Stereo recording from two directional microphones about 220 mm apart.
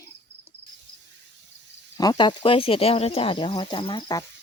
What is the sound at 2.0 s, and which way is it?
Speech, 20° left (ahead or behind).